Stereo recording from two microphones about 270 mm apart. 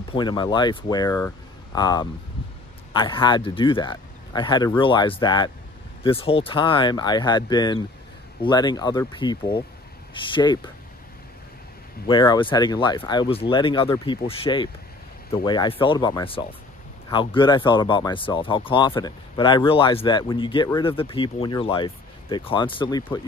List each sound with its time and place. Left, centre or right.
0.1 s speech: centre
12.1 s speech: centre